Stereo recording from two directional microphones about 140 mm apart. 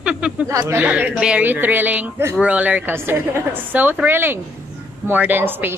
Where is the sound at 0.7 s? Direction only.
10° right (ahead or behind).